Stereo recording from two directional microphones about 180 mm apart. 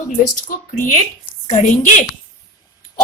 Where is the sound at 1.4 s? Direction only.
40° left (ahead or behind).